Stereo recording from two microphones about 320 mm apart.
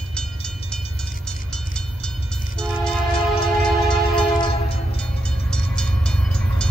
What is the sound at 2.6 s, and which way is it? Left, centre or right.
Train, centre.